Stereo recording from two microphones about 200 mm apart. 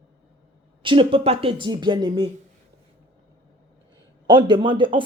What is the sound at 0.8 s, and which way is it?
Speech, 25° right (ahead or behind).